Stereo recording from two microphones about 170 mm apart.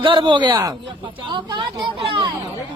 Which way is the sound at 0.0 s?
30° right (ahead or behind).